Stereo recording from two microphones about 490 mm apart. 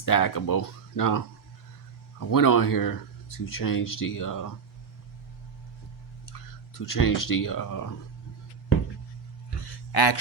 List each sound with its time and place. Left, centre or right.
0.0 s speech: left
2.3 s speech: left
6.7 s speech: left
9.9 s speech: left